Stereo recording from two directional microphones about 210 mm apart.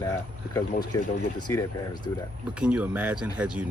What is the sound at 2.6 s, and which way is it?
Speech, 5° right (ahead or behind).